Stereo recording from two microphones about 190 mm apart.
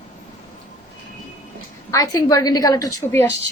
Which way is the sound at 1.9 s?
20° left (ahead or behind).